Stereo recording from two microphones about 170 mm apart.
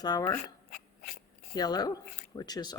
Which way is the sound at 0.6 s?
60° left (ahead or behind).